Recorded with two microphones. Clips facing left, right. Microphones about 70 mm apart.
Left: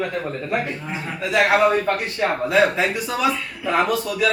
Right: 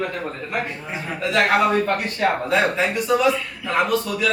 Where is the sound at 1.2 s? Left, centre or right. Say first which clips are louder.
Left 1 dB; centre.